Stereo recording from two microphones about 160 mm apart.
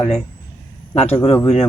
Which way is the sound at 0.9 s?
40° left (ahead or behind).